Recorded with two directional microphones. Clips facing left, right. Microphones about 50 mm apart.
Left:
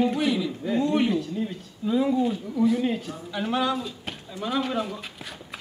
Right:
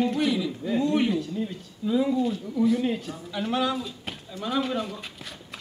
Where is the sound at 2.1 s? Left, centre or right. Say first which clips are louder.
Left 1 dB; centre.